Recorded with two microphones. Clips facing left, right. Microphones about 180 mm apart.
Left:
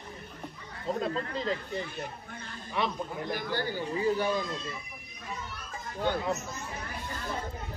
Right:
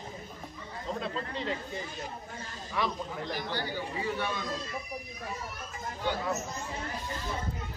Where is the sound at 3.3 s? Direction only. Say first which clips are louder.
Left 3 dB; 50° left (ahead or behind).